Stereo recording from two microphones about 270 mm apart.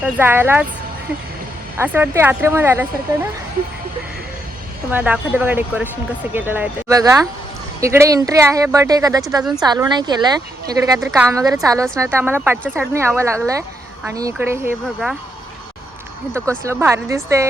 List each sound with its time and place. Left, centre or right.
0.0 s speech: centre
1.8 s speech: centre
4.9 s speech: centre
16.6 s speech: centre